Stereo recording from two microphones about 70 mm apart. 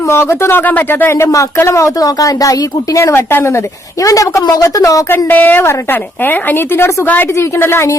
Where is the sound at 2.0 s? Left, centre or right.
Left.